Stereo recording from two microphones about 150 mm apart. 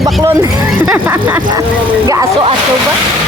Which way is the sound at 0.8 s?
15° right (ahead or behind).